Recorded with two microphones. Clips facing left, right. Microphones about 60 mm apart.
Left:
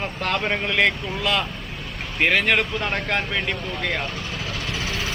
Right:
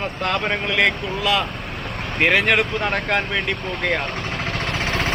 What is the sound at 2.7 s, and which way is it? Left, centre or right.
Speech, right.